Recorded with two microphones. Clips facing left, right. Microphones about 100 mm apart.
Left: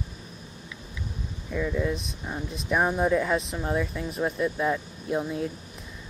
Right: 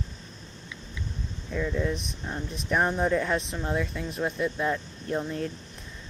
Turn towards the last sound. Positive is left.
turn(degrees=10)  # may be behind; listen again after turning